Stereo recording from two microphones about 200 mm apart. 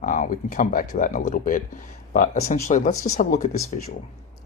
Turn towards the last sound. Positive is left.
turn(degrees=40)  # may be behind; listen again after turning